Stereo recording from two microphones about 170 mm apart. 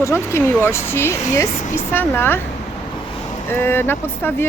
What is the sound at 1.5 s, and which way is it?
Speech, 40° left (ahead or behind).